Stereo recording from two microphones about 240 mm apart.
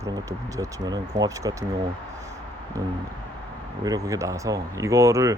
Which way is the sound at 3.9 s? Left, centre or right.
Centre.